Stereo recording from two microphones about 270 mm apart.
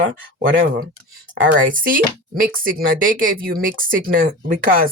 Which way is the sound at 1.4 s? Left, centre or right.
Right.